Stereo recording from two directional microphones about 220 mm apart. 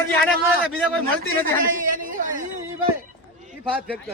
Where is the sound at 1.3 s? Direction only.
40° right (ahead or behind).